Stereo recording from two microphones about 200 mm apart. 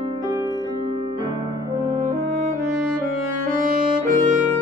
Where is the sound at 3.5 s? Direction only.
40° right (ahead or behind).